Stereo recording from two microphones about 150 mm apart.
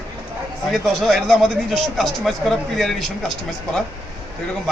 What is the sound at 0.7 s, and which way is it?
Speech, centre (ahead or behind).